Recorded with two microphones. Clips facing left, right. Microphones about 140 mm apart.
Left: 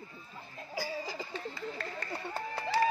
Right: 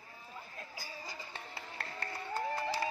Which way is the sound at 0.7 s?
90° left.